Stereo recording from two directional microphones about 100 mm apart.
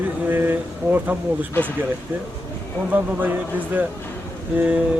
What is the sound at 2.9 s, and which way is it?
Speech, 15° right (ahead or behind).